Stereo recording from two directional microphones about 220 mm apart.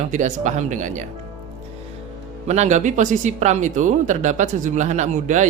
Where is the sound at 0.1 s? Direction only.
35° right (ahead or behind).